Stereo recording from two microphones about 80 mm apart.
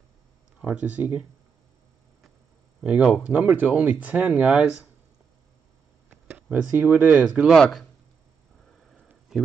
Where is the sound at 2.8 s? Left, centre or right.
Centre.